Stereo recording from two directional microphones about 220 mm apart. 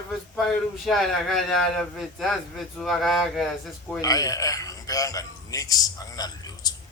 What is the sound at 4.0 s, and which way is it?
A man's voice, 15° left (ahead or behind).